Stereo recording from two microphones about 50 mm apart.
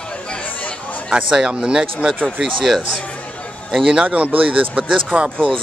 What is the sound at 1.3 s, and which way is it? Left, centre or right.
Speech, centre.